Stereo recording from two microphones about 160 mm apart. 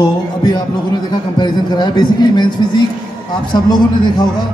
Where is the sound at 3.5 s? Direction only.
30° left (ahead or behind).